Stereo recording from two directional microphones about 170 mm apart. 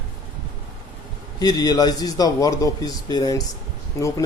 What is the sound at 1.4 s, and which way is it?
Speech, 20° left (ahead or behind).